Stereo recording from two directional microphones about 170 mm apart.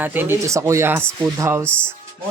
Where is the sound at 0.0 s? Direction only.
10° right (ahead or behind).